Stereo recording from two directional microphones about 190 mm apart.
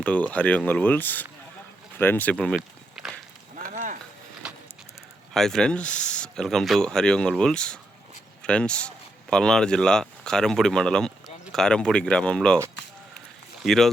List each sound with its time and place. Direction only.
0.0 s speech: 5° left (ahead or behind)
2.6 s walk: 5° right (ahead or behind)
3.6 s a sound: 40° right (ahead or behind)
4.4 s horse: 5° right (ahead or behind)
5.3 s speech: centre (ahead or behind)
13.6 s speech: centre (ahead or behind)